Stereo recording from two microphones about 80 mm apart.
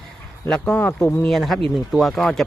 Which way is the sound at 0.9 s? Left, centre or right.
Left.